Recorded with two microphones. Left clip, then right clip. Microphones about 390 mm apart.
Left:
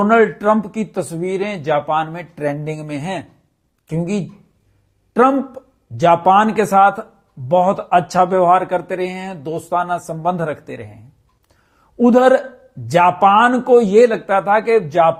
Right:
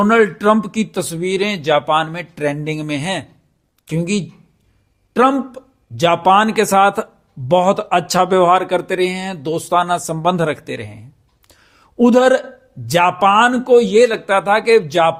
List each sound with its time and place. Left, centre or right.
0.0 s speech: right